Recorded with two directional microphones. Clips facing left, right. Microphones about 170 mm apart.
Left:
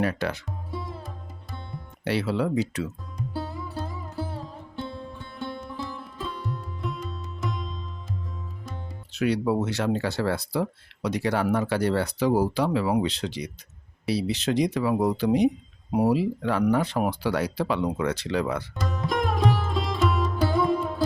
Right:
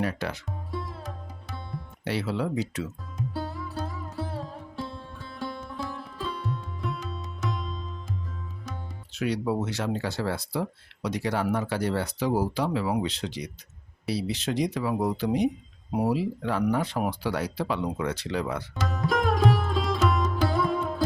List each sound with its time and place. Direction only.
0.0 s speech: 65° left (ahead or behind)
0.7 s music: centre (ahead or behind)
2.0 s speech: 70° left (ahead or behind)
3.2 s sitar: centre (ahead or behind)
9.1 s speech: 65° left (ahead or behind)
18.8 s sitar: centre (ahead or behind)